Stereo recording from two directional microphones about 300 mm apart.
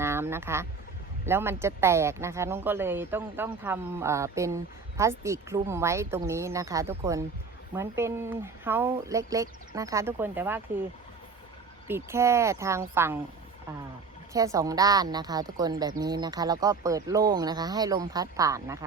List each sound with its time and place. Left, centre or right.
0.0 s a sound: centre
1.2 s speech: centre
11.9 s speech: centre
14.3 s speech: centre